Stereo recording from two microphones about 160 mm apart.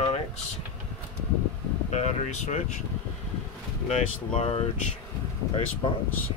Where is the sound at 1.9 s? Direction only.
45° left (ahead or behind).